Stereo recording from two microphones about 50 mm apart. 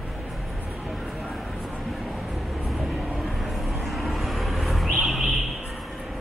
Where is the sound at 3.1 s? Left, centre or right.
Centre.